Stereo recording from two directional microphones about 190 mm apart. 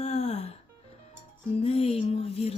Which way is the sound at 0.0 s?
35° left (ahead or behind).